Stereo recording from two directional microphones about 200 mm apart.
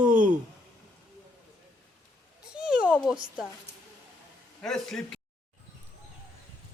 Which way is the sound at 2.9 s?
Centre (ahead or behind).